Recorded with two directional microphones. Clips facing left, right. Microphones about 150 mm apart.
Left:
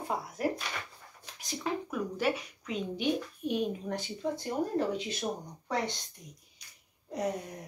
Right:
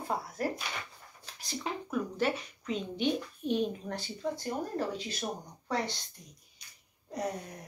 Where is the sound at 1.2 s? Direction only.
15° left (ahead or behind).